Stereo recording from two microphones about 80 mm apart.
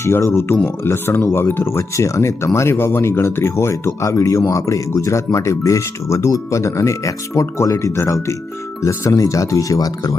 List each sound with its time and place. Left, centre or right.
0.0 s speech: left